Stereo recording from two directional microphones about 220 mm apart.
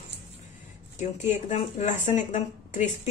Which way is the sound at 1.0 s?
35° left (ahead or behind).